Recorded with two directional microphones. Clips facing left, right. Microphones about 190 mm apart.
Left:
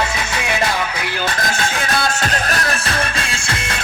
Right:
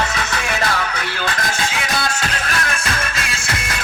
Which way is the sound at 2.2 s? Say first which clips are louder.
Left 3 dB; 40° left (ahead or behind).